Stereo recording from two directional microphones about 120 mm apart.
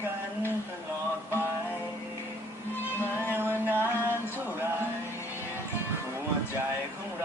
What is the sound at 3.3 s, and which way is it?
Music, 20° right (ahead or behind).